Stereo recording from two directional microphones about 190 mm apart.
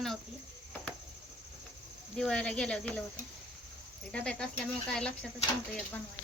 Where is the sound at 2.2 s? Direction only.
5° left (ahead or behind).